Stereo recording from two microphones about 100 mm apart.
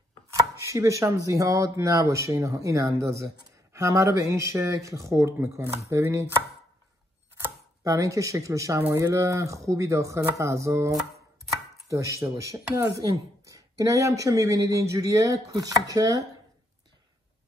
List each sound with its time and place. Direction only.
0.3 s chopping: 30° right (ahead or behind)
7.8 s chopping: 30° right (ahead or behind)